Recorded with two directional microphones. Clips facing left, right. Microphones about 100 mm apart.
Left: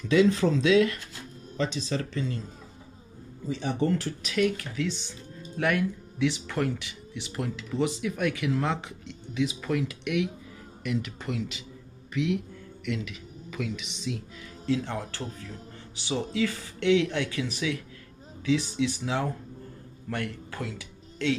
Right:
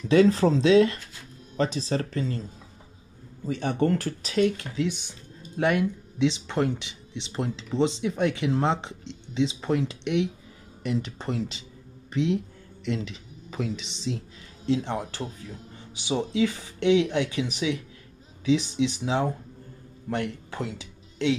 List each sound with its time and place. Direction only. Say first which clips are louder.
0.1 s speech: right 3 dB; 35° right (ahead or behind)
3.4 s speech: right 3 dB; 55° right (ahead or behind)
4.2 s speech: right 4 dB; 30° right (ahead or behind)
4.8 s speech: right 2 dB; 15° right (ahead or behind); by 14.2 s 30° right (ahead or behind)
14.7 s speech: right 2 dB; 20° right (ahead or behind)